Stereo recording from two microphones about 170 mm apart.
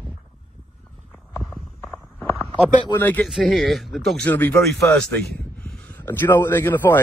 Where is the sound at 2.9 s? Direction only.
10° left (ahead or behind).